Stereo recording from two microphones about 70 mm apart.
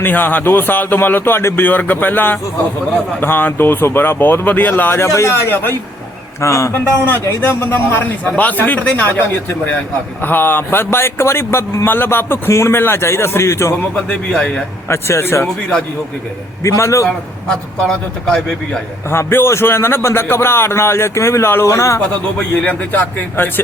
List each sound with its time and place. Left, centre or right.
0.0 s a man's voice: left
5.0 s a man's voice: left
6.4 s a man's voice: left
6.7 s a man's voice: left
13.9 s a man's voice: centre
14.8 s a man's voice: left
16.6 s a man's voice: left
17.8 s a man's voice: centre
19.1 s a man's voice: left
22.4 s speech: left